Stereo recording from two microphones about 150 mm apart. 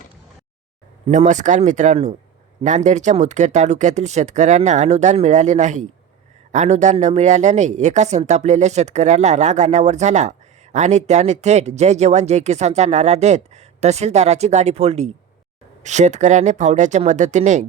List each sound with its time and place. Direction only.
1.0 s speech: 55° right (ahead or behind)